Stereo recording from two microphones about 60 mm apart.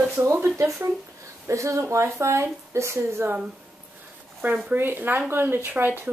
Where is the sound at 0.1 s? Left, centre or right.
Right.